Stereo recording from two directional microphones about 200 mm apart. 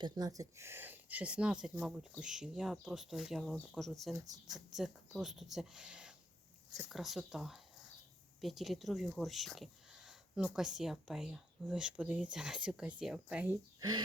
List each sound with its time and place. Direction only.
0.0 s speech: 20° right (ahead or behind)
13.7 s speech: 20° right (ahead or behind)